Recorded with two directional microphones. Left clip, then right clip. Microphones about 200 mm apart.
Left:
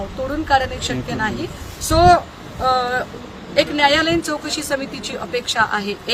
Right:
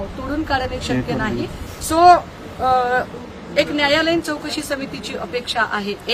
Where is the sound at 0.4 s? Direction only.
5° right (ahead or behind).